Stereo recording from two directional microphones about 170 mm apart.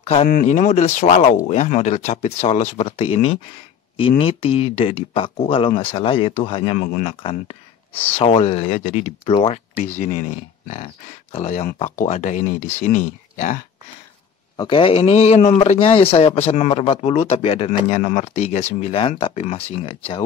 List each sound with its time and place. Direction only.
0.3 s speech: 50° left (ahead or behind)
11.6 s speech: 50° left (ahead or behind)
14.6 s speech: 30° left (ahead or behind)